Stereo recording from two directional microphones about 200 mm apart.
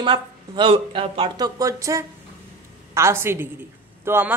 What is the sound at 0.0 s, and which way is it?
A woman's voice, 25° right (ahead or behind).